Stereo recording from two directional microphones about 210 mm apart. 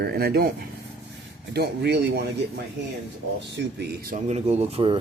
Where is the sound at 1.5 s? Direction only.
50° right (ahead or behind).